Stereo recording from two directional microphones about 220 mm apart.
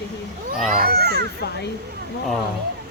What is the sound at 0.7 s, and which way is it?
Speech, 45° right (ahead or behind).